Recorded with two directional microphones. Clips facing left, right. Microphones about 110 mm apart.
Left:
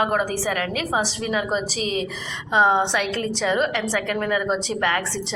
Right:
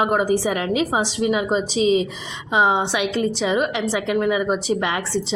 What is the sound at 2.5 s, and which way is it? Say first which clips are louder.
A woman's voice: even; 10° right (ahead or behind).